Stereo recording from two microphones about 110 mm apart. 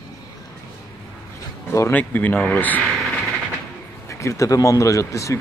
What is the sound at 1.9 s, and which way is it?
Speech, 15° left (ahead or behind).